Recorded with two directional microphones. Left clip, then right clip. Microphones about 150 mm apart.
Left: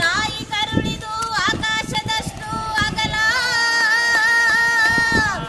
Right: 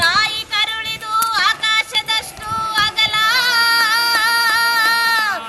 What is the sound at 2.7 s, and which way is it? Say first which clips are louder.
Music: right 4 dB; 5° left (ahead or behind).